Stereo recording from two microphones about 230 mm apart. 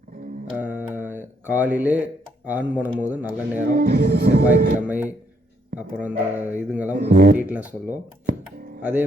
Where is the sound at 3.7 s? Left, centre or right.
Right.